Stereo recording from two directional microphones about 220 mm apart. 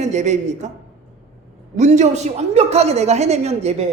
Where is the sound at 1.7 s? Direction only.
30° right (ahead or behind).